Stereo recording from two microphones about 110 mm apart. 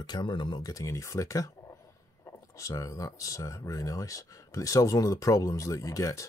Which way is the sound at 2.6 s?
30° left (ahead or behind).